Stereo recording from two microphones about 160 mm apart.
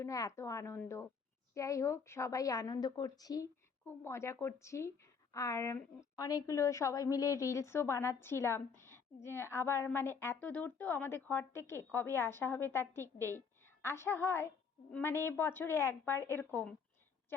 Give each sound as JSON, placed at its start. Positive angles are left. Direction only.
{"t": 0.0, "sound": "a woman's voice", "side_deg": 20}